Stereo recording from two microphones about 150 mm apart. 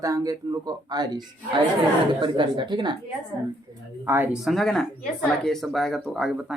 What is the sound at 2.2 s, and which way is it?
Speech, 30° right (ahead or behind).